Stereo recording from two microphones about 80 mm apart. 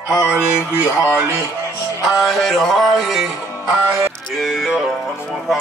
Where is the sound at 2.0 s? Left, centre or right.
Centre.